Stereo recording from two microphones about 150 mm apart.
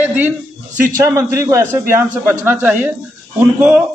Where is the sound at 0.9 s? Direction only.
20° right (ahead or behind).